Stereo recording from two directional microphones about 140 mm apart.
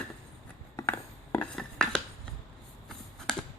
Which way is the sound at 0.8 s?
15° left (ahead or behind).